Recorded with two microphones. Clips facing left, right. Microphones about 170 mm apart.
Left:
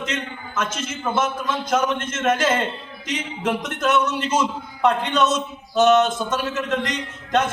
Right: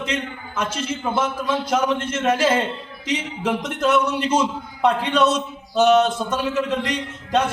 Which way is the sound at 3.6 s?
30° right (ahead or behind).